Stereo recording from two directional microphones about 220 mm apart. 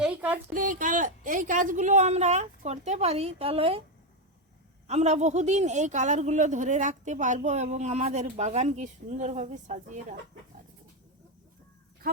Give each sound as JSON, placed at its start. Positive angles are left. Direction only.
{"t": 0.0, "sound": "a sound", "side_deg": -5}
{"t": 0.5, "sound": "speech", "side_deg": -35}
{"t": 4.9, "sound": "speech", "side_deg": -30}